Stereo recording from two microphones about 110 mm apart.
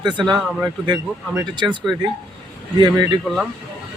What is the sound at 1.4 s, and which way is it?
Speech, 45° right (ahead or behind).